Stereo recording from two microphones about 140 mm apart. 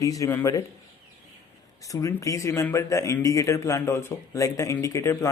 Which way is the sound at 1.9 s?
25° left (ahead or behind).